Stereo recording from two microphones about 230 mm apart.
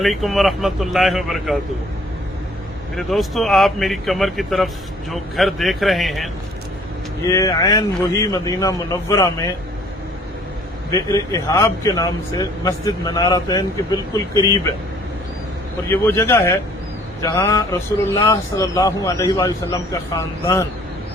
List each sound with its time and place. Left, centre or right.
0.0 s speech: centre
2.9 s speech: centre
7.3 s speech: centre
10.9 s speech: centre
15.9 s speech: centre